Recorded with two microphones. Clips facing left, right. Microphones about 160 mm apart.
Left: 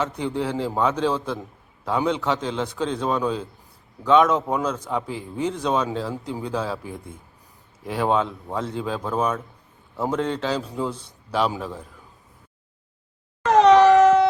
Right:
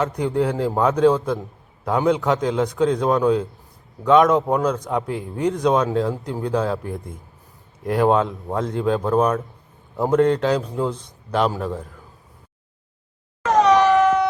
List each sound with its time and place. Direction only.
0.0 s a man's voice: centre (ahead or behind)
4.9 s a man's voice: centre (ahead or behind)
5.6 s speech: 10° right (ahead or behind)
6.0 s a man's voice: 5° left (ahead or behind)
10.6 s speech: 10° right (ahead or behind)
10.9 s a man's voice: 10° left (ahead or behind)
13.7 s a sound: 30° left (ahead or behind)